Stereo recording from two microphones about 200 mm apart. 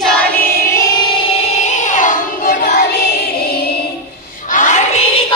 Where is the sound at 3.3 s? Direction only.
50° left (ahead or behind).